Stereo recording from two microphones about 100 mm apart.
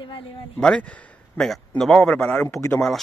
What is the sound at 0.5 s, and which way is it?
A man's voice, 10° left (ahead or behind).